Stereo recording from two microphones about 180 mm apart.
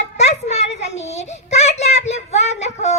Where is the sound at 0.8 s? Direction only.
40° left (ahead or behind).